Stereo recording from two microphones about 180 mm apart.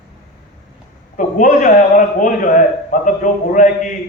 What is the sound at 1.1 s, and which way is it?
A man's voice, 45° left (ahead or behind).